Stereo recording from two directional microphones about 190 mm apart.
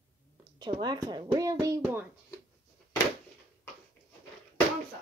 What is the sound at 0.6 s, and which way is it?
Speech, 20° right (ahead or behind).